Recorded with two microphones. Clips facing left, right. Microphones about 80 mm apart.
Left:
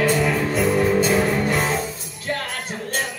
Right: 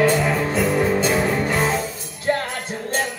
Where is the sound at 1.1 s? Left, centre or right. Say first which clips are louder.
Even; centre.